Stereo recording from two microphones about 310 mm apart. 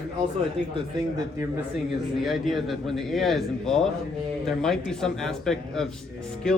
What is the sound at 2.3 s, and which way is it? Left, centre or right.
A man's voice, centre.